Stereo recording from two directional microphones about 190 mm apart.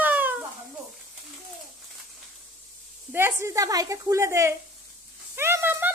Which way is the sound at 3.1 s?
15° right (ahead or behind).